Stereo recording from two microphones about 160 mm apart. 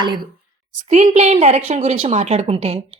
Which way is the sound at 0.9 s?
45° right (ahead or behind).